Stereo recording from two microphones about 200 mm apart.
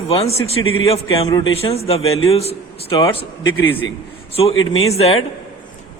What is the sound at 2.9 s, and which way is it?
Speech, 15° left (ahead or behind).